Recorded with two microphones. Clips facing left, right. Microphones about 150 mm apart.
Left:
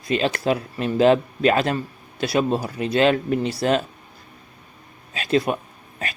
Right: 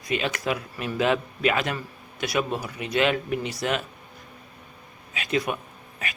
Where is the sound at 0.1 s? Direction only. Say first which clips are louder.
Left 6 dB; 30° left (ahead or behind).